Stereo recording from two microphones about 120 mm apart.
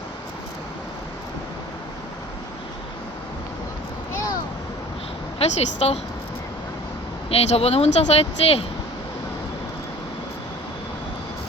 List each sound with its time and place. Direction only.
5.4 s speech: 60° left (ahead or behind)
7.3 s speech: 60° left (ahead or behind)